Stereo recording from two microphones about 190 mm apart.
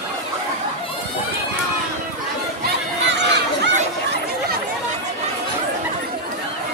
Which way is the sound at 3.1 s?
65° right (ahead or behind).